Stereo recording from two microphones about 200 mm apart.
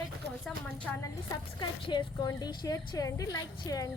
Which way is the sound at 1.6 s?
20° left (ahead or behind).